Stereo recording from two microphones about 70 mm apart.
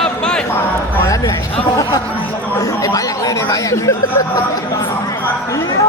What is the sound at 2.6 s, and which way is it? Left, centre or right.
Chatter, left.